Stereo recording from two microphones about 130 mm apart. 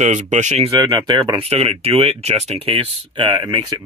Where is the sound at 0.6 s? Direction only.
30° right (ahead or behind).